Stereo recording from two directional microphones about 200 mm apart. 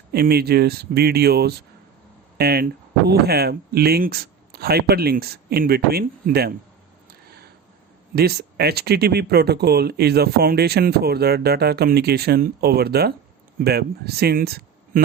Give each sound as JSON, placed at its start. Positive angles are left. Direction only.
{"t": 0.1, "sound": "speech", "side_deg": -50}
{"t": 8.1, "sound": "speech", "side_deg": -50}